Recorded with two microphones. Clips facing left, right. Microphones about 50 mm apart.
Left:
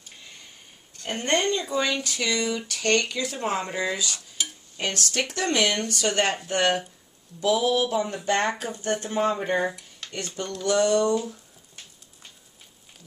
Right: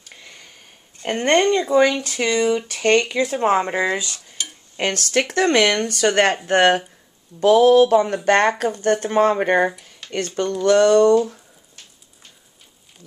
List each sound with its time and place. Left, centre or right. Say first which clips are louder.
1.0 s speech: right 8 dB; right
2.0 s speech: right 7 dB; right
4.4 s stir: right 1 dB; centre
4.7 s speech: right 7 dB; right
5.8 s speech: right 7 dB; right
9.8 s a sound: right 1 dB; centre
10.1 s speech: right 10 dB; right